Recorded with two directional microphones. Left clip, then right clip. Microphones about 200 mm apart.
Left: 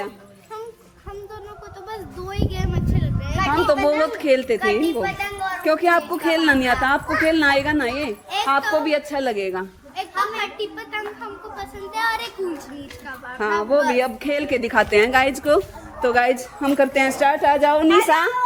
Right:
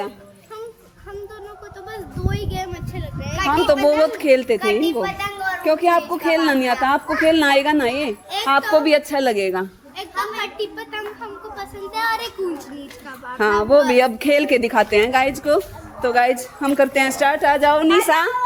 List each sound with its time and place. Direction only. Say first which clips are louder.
1.9 s a woman's voice: right 2 dB; centre (ahead or behind)
3.3 s a woman's voice: right 2 dB; 45° right (ahead or behind)
4.0 s a woman's voice: right 3 dB; 30° right (ahead or behind)
4.6 s a woman's voice: right 1 dB; 50° right (ahead or behind)
5.0 s a sound: right 1 dB; 55° right (ahead or behind)
5.6 s speech: right 1 dB; 10° right (ahead or behind)
6.8 s a woman's voice: right 2 dB; 30° right (ahead or behind)
8.3 s a sound: left 3 dB; centre (ahead or behind)
8.7 s a woman's voice: right 5 dB; 45° right (ahead or behind)
10.4 s a woman's voice: right 1 dB; 5° right (ahead or behind)
13.4 s a woman's voice: right 4 dB; 55° right (ahead or behind)
14.6 s a woman's voice: right 1 dB; 20° right (ahead or behind)
14.9 s a woman's voice: even; centre (ahead or behind)